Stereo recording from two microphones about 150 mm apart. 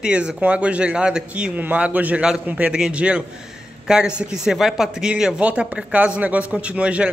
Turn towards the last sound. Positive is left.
turn(degrees=-10)  # may be behind; listen again after turning